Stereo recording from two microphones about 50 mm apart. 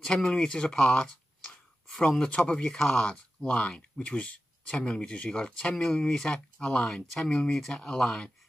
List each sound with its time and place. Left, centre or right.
0.0 s speech: centre
2.2 s speech: left
5.8 s speech: centre
6.8 s speech: centre